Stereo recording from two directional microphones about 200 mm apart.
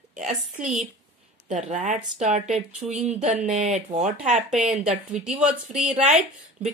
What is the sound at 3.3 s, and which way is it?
Speech, 35° right (ahead or behind).